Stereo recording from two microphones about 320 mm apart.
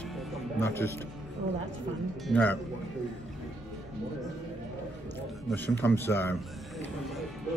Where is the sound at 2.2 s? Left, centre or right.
Centre.